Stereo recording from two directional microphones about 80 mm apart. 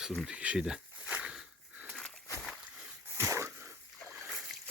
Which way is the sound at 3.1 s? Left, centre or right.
Right.